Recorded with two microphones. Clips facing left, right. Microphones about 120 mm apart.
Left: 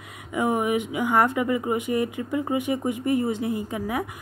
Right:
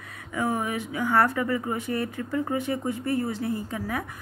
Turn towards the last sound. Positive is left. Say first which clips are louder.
# left 3 dB
turn(degrees=15)  # may be behind; listen again after turning